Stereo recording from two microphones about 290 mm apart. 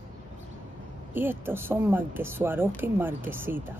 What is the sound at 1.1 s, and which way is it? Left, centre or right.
Speech, centre.